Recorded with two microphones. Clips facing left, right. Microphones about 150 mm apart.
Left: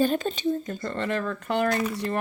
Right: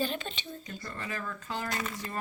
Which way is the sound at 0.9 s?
70° left (ahead or behind).